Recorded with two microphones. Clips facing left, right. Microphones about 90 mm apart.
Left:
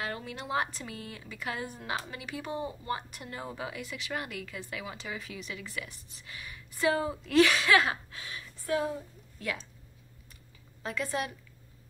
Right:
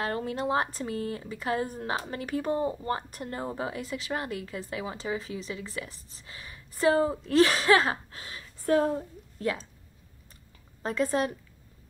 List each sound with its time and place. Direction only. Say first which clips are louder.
0.0 s a woman's voice: right 8 dB; 40° right (ahead or behind)
10.8 s a woman's voice: right 6 dB; 35° right (ahead or behind)